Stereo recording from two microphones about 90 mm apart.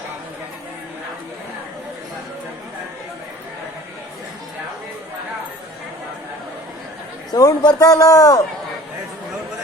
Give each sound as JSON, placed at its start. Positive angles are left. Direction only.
{"t": 7.3, "sound": "a man's voice", "side_deg": 45}